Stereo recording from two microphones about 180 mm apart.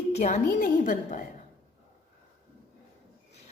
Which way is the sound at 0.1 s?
40° left (ahead or behind).